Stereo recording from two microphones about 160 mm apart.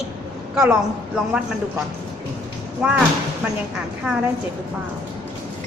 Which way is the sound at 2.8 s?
5° right (ahead or behind).